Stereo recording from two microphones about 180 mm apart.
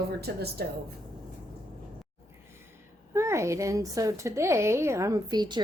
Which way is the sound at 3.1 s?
15° right (ahead or behind).